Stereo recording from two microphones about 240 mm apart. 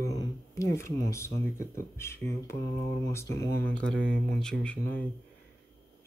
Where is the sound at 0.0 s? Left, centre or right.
Centre.